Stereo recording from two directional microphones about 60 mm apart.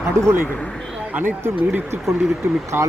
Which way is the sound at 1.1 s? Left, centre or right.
Right.